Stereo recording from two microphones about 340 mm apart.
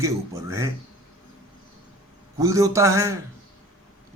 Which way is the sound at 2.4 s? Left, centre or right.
Centre.